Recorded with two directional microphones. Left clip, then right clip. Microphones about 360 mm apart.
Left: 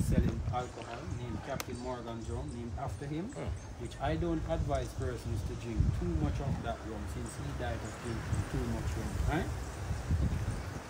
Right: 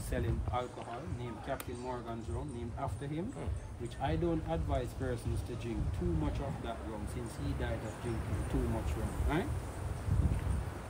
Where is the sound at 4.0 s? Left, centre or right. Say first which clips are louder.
Even; centre.